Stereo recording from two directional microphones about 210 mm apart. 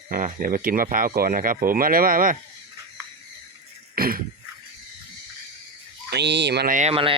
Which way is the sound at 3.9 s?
45° right (ahead or behind).